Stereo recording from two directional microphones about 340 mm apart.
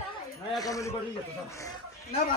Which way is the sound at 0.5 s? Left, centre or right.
Centre.